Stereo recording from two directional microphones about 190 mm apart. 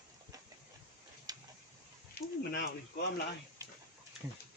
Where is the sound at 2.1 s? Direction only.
55° left (ahead or behind).